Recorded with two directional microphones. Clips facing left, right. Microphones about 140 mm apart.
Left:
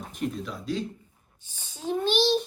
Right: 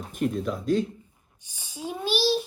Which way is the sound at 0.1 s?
50° right (ahead or behind).